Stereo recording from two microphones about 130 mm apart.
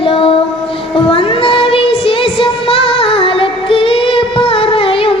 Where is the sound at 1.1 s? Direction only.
45° left (ahead or behind).